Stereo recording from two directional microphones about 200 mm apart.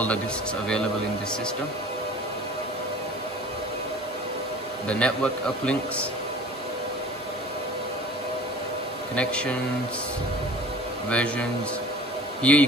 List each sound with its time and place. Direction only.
4.8 s a man's voice: 5° left (ahead or behind)
9.1 s a man's voice: 5° left (ahead or behind)
11.1 s a man's voice: 5° left (ahead or behind)